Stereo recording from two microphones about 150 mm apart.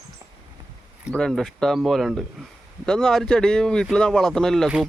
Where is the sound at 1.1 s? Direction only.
5° left (ahead or behind).